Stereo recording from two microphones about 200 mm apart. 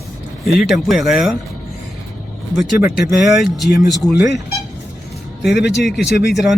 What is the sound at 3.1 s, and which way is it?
Speech, centre (ahead or behind).